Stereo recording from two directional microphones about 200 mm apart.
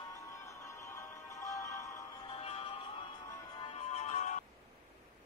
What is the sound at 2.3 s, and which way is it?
Music, 30° left (ahead or behind).